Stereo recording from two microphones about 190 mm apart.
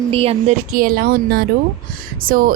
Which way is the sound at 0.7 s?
50° right (ahead or behind).